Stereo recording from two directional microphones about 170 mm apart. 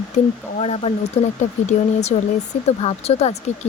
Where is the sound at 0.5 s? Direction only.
40° left (ahead or behind).